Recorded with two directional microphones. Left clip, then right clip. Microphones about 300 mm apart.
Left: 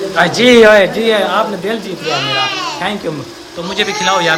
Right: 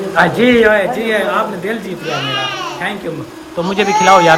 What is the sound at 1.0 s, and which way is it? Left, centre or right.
Speech, centre.